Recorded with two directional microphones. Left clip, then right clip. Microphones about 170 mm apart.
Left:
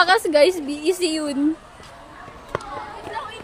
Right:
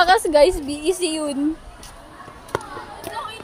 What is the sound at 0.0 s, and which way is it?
Speech, centre (ahead or behind).